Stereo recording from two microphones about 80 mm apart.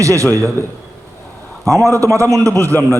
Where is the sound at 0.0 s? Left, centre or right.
Right.